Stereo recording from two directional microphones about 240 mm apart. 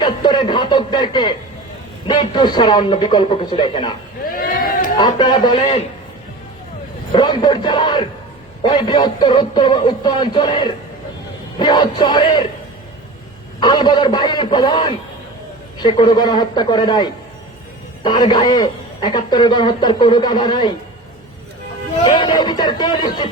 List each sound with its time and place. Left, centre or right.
0.0 s speech: centre
4.2 s a sound: left
4.9 s speech: centre
7.1 s a man's voice: centre
13.6 s a man's voice: centre
22.0 s a man's voice: centre